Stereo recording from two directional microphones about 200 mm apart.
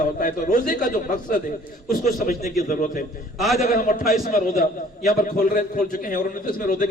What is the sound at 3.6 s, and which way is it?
A man's voice, 45° left (ahead or behind).